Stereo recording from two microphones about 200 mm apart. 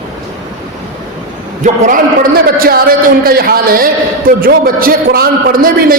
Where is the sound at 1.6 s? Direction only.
40° right (ahead or behind).